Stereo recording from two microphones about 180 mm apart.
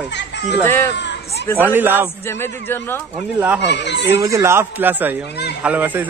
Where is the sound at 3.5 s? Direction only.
70° left (ahead or behind).